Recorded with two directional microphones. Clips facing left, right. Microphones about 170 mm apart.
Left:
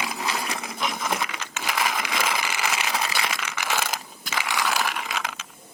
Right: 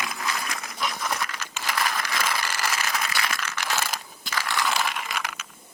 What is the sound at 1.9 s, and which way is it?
Vehicle, 15° left (ahead or behind).